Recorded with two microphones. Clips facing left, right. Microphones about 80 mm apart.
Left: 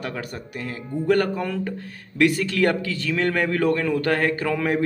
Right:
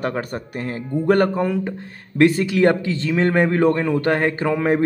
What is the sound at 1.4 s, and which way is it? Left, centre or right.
A man's voice, right.